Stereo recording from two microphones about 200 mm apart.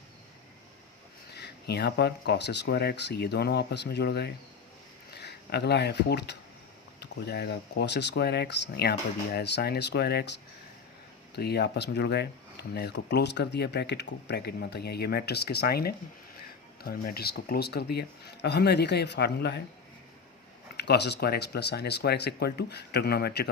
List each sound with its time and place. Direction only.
1.4 s speech: 55° left (ahead or behind)
11.3 s speech: 55° left (ahead or behind)
20.7 s speech: 55° left (ahead or behind)